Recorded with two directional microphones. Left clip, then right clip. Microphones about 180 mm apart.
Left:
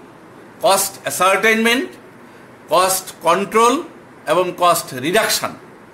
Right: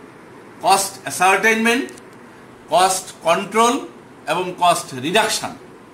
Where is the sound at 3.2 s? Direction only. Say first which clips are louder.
Left 2 dB; 70° left (ahead or behind).